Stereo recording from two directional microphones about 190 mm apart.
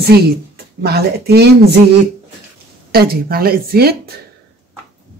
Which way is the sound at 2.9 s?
55° right (ahead or behind).